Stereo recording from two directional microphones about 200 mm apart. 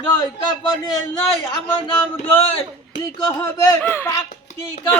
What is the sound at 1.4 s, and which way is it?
Speech, 20° left (ahead or behind).